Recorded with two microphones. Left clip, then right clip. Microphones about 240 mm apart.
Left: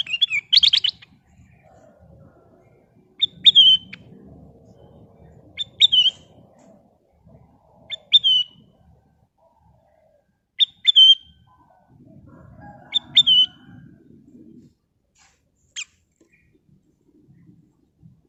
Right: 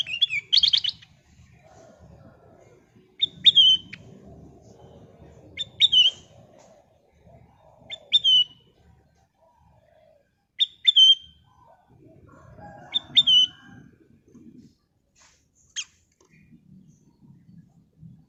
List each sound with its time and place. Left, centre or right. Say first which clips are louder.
0.0 s chirp: left 3 dB; left
3.6 s bird: left 4 dB; centre
5.5 s bird: left 2 dB; centre
8.1 s bird: left 3 dB; centre
10.6 s bird: left 4 dB; left
12.9 s bird: left 3 dB; left
15.8 s rodents: left 1 dB; centre